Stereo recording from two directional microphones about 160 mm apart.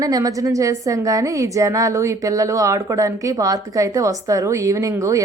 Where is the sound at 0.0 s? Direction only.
20° right (ahead or behind).